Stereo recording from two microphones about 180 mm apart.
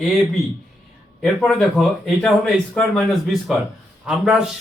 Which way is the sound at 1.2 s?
5° left (ahead or behind).